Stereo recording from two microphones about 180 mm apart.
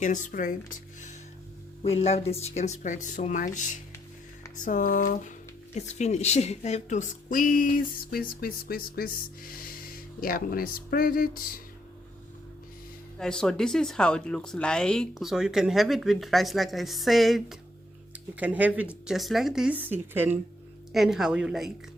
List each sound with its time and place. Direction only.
0.0 s speech: 45° left (ahead or behind)
1.8 s speech: 35° left (ahead or behind); by 11.6 s 55° left (ahead or behind)
13.1 s speech: 5° left (ahead or behind)